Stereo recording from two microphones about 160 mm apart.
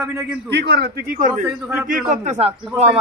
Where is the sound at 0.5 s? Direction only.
90° right; by 1.4 s 60° right (ahead or behind).